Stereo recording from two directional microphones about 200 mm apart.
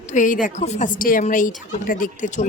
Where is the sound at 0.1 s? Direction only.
40° left (ahead or behind).